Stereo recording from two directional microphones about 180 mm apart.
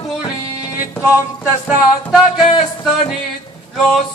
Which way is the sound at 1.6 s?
Centre (ahead or behind).